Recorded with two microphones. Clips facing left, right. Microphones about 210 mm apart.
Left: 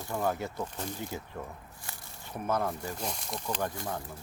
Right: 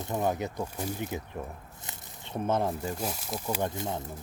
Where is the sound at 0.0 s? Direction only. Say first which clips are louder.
Right 2 dB; 20° right (ahead or behind).